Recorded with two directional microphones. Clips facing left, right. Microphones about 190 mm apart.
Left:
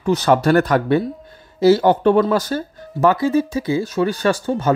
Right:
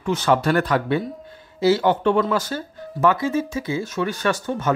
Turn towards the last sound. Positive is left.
turn(degrees=35)  # may be behind; listen again after turning